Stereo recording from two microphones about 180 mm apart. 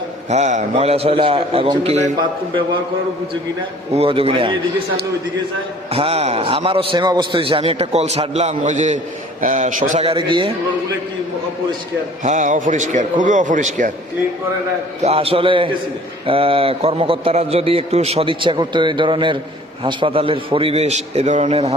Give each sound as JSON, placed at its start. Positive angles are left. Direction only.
{"t": 0.3, "sound": "a man's voice", "side_deg": -40}
{"t": 3.9, "sound": "a man's voice", "side_deg": -30}
{"t": 5.9, "sound": "a man's voice", "side_deg": -30}
{"t": 10.0, "sound": "a man's voice", "side_deg": -30}
{"t": 12.2, "sound": "a man's voice", "side_deg": -40}
{"t": 15.0, "sound": "a man's voice", "side_deg": -30}